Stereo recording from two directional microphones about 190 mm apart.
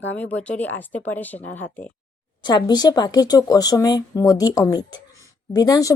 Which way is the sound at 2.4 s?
20° left (ahead or behind).